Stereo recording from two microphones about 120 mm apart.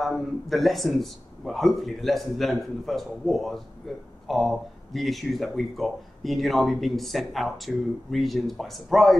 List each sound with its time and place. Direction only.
0.0 s speech: centre (ahead or behind)